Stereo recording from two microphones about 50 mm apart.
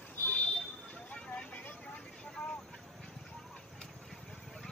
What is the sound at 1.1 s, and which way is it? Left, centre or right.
Vehicle, left.